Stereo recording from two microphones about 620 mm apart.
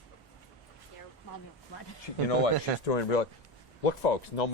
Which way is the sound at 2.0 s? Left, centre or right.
Left.